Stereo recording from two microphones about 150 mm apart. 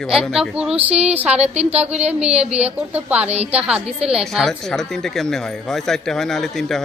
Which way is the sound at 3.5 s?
5° right (ahead or behind).